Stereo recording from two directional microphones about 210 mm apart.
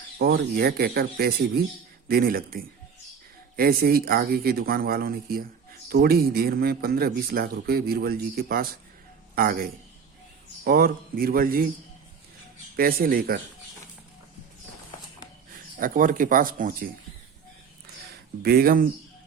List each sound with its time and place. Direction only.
0.2 s a man's voice: 45° right (ahead or behind)
12.7 s speech: 45° right (ahead or behind)
15.8 s speech: 40° right (ahead or behind)
18.4 s speech: 45° right (ahead or behind)